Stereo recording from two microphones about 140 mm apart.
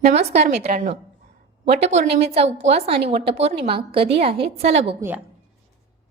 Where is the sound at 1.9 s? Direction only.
50° right (ahead or behind).